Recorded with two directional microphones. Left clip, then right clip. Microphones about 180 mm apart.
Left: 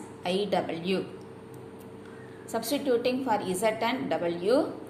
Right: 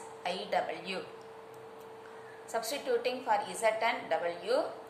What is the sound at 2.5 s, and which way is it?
A woman's voice, 15° left (ahead or behind).